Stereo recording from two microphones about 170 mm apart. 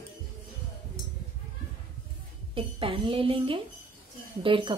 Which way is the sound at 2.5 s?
30° right (ahead or behind).